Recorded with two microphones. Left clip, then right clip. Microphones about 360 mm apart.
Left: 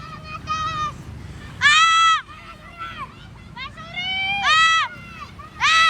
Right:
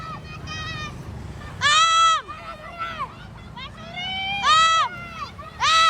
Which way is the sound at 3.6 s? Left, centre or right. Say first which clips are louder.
Left 4 dB; centre.